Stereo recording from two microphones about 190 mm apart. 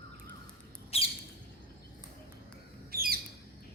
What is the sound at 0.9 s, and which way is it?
Squawk, 30° left (ahead or behind).